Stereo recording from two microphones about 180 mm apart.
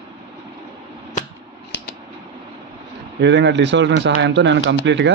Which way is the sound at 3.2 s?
75° right (ahead or behind).